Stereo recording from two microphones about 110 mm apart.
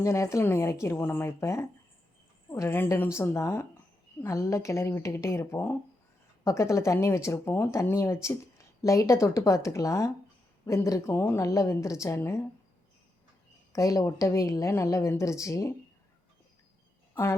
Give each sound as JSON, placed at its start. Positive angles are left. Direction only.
{"t": 0.0, "sound": "speech", "side_deg": 25}
{"t": 13.7, "sound": "speech", "side_deg": 30}